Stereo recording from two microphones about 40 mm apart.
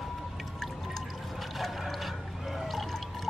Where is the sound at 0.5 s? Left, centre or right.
Centre.